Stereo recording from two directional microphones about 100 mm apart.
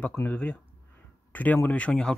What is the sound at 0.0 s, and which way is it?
Speech, 20° left (ahead or behind).